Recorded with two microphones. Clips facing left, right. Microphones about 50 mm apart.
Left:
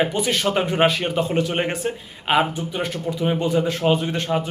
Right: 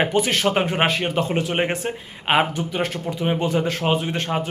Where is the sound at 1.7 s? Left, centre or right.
Right.